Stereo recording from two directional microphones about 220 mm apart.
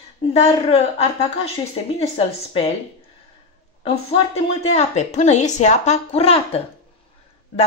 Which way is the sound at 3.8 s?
25° left (ahead or behind).